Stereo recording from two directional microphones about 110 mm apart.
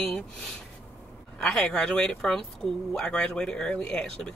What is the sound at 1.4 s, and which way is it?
Speech, 5° left (ahead or behind).